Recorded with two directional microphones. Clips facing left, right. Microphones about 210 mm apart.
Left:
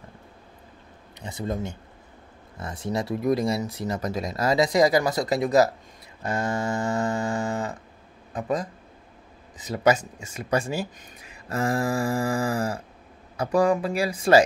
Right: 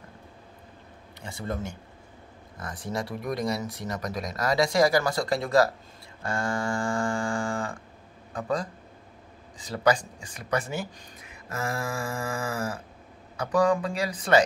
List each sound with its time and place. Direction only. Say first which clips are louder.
1.2 s a man's voice: left 3 dB; 20° left (ahead or behind)
11.4 s a sound: left 7 dB; 30° left (ahead or behind)
13.4 s speech: left 2 dB; 30° left (ahead or behind)